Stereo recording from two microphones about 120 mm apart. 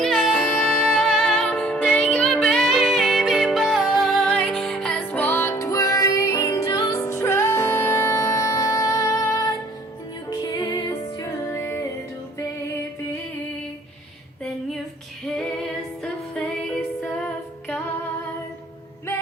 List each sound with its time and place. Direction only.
0.0 s music: 5° left (ahead or behind); by 11.9 s 25° left (ahead or behind)
15.4 s female singing: 5° left (ahead or behind)